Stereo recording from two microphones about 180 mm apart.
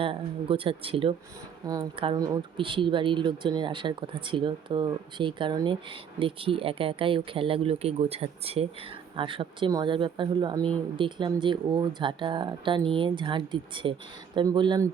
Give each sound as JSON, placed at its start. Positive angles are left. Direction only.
{"t": 0.0, "sound": "speech", "side_deg": -30}